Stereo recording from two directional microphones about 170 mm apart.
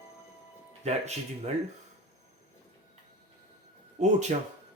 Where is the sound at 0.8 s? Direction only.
40° right (ahead or behind).